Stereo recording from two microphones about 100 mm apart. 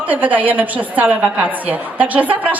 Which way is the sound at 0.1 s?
15° right (ahead or behind).